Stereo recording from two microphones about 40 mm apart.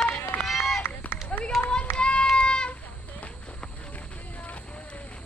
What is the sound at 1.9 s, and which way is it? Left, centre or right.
Child singing, left.